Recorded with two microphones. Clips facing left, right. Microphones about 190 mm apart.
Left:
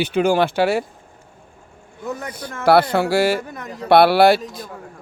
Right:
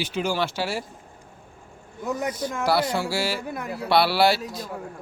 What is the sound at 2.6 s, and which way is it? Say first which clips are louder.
Speech: left 9 dB; 60° left (ahead or behind).